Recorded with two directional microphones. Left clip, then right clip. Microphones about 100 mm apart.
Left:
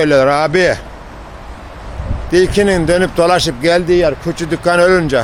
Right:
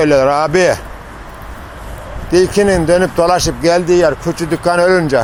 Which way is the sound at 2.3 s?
20° left (ahead or behind).